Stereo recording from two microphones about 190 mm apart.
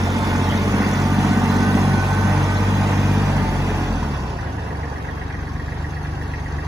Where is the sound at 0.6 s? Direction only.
15° right (ahead or behind).